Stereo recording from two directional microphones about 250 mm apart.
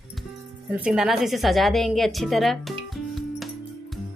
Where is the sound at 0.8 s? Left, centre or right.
Centre.